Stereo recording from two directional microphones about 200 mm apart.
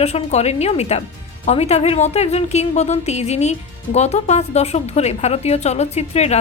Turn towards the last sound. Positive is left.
turn(degrees=35)  # may be behind; listen again after turning